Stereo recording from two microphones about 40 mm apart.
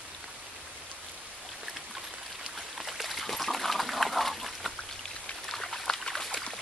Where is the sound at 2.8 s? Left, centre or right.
Centre.